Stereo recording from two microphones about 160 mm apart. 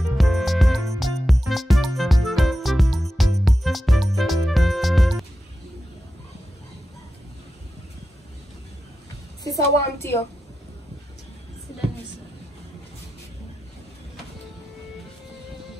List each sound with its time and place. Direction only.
0.2 s music: centre (ahead or behind)
9.4 s a woman's voice: 20° left (ahead or behind)